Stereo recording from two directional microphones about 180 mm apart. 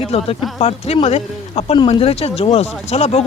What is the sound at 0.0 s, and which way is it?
Speech, 35° left (ahead or behind).